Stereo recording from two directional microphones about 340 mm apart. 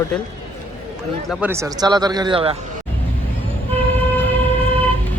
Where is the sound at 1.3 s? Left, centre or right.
Centre.